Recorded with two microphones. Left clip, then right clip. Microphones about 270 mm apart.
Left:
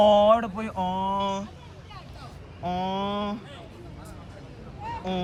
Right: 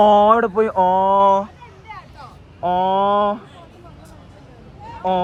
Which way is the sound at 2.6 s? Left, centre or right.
Right.